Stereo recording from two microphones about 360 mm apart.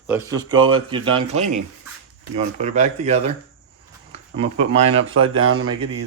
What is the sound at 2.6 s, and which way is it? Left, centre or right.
Speech, centre.